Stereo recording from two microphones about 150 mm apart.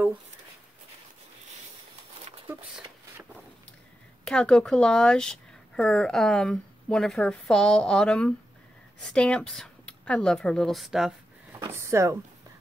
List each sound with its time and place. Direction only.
4.2 s a woman's voice: 5° left (ahead or behind)
11.7 s speech: 20° right (ahead or behind)